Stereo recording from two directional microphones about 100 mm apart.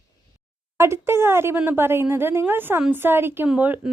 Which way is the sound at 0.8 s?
25° right (ahead or behind).